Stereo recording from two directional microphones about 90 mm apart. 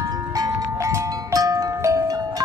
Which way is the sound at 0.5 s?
30° right (ahead or behind).